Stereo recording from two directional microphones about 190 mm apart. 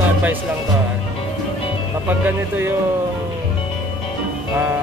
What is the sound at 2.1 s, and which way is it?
Speech, 10° right (ahead or behind).